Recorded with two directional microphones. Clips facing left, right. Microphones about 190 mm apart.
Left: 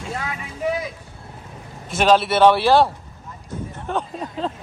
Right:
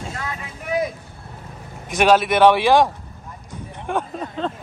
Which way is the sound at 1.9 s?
10° right (ahead or behind).